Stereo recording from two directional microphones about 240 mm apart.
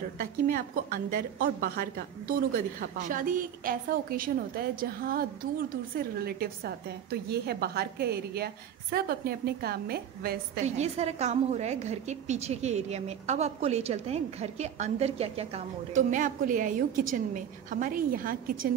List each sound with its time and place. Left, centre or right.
0.2 s a woman's voice: right
11.0 s a woman's voice: right